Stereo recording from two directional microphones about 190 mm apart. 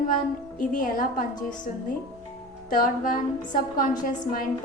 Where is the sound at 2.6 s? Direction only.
45° left (ahead or behind).